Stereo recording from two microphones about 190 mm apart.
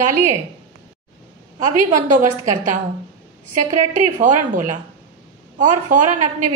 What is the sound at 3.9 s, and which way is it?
Speech, 40° right (ahead or behind).